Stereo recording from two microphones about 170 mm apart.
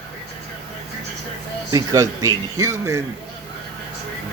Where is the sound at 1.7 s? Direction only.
20° right (ahead or behind).